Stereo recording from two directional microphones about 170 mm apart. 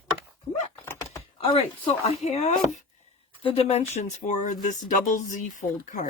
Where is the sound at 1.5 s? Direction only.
35° left (ahead or behind).